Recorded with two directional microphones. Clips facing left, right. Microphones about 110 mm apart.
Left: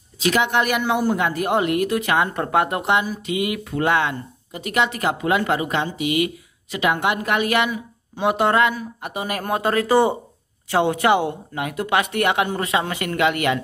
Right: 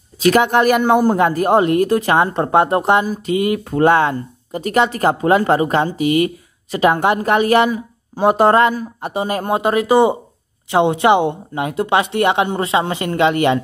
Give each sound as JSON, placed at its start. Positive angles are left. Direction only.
{"t": 0.2, "sound": "a woman's voice", "side_deg": -45}